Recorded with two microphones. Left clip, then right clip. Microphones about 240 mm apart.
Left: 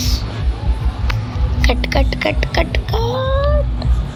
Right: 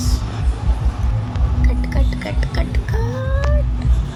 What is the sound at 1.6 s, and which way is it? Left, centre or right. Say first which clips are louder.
Speech: left 11 dB; left.